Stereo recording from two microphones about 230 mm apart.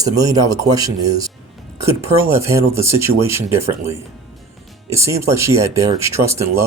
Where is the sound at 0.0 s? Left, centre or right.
Centre.